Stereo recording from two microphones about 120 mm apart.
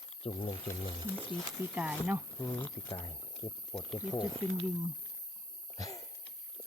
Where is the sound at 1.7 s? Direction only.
10° right (ahead or behind).